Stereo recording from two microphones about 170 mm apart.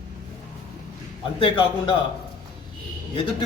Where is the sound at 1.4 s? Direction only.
30° left (ahead or behind).